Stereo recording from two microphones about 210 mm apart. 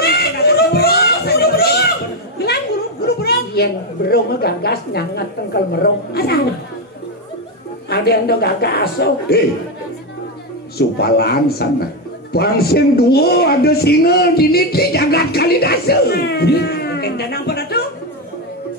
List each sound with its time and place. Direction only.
0.0 s chatter: 50° left (ahead or behind)
2.3 s a sound: 50° left (ahead or behind)
3.2 s a man's voice: 50° left (ahead or behind)
7.9 s a man's voice: 50° left (ahead or behind)
10.8 s a man's voice: 50° left (ahead or behind)